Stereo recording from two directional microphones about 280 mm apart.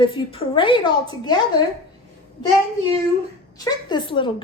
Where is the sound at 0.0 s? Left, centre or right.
Centre.